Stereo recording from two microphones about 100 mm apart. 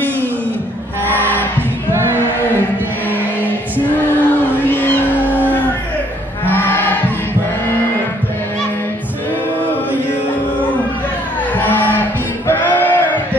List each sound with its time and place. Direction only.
1.0 s music: 20° left (ahead or behind)
4.2 s cat: 20° left (ahead or behind)
5.3 s music: 20° left (ahead or behind)
6.4 s a sound: 20° left (ahead or behind)
11.5 s music: 20° left (ahead or behind)
12.4 s choir: 20° left (ahead or behind)